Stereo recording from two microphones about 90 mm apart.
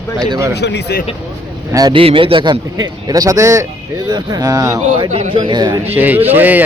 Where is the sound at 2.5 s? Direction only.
50° right (ahead or behind).